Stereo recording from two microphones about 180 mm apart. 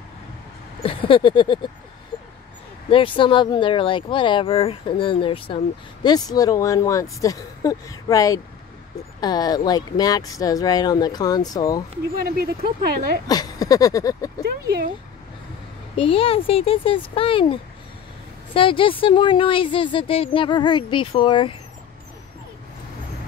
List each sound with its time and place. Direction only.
0.8 s speech: 30° left (ahead or behind)
2.9 s speech: 30° left (ahead or behind)
12.3 s speech: 55° right (ahead or behind)
13.3 s speech: 20° left (ahead or behind)
16.0 s speech: 30° left (ahead or behind)